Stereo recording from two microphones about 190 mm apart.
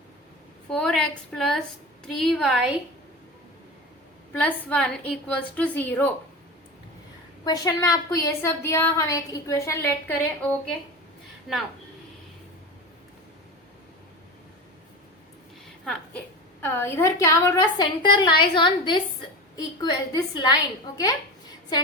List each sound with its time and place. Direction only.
0.7 s a woman's voice: 5° left (ahead or behind)
4.4 s a woman's voice: 10° left (ahead or behind)
7.4 s a woman's voice: 20° left (ahead or behind)
11.5 s a woman's voice: centre (ahead or behind)
15.9 s a woman's voice: 10° left (ahead or behind)